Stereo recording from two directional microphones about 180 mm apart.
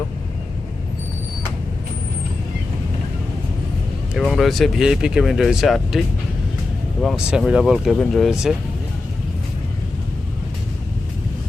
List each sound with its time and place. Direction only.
4.1 s speech: centre (ahead or behind)
7.0 s speech: centre (ahead or behind)